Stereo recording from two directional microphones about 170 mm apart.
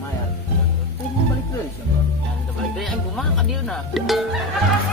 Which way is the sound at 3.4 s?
Centre (ahead or behind).